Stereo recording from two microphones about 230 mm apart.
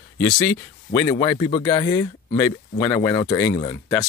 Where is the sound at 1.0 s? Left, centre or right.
Centre.